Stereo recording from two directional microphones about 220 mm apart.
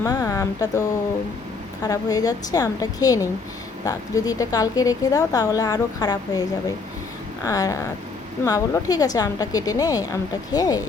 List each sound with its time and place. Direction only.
0.0 s a woman's voice: 15° left (ahead or behind)
7.4 s a woman's voice: 15° left (ahead or behind)